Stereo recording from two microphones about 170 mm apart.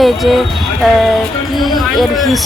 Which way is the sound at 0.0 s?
Centre (ahead or behind).